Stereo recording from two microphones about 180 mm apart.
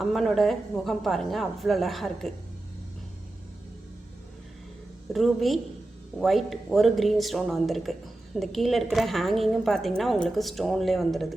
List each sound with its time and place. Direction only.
0.0 s speech: centre (ahead or behind)
5.1 s speech: centre (ahead or behind)